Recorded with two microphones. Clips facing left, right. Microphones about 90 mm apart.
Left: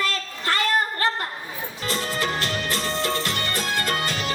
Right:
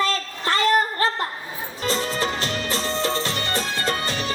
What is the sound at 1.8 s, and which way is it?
Music, 30° right (ahead or behind).